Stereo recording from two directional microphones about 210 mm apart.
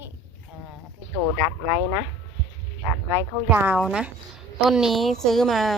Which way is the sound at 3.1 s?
10° right (ahead or behind).